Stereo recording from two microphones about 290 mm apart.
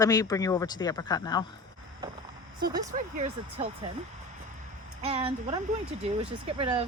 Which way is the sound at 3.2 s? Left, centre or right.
Centre.